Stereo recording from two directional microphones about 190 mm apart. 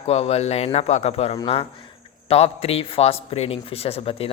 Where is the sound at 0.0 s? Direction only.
35° left (ahead or behind).